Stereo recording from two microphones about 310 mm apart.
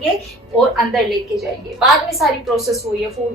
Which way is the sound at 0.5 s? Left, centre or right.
Centre.